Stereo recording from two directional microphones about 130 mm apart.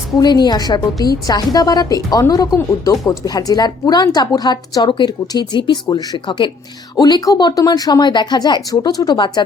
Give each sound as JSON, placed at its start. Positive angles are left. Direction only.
{"t": 0.2, "sound": "a woman's voice", "side_deg": 35}